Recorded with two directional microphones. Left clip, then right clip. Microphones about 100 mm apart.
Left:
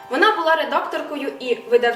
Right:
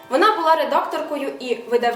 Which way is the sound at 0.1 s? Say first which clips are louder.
Right 1 dB; 15° right (ahead or behind).